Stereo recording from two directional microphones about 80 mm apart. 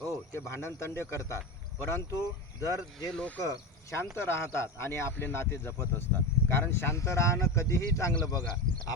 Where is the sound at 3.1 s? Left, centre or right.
Centre.